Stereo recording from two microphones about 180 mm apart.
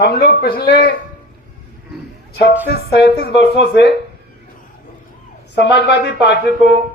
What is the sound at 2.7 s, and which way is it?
Speech, 65° left (ahead or behind).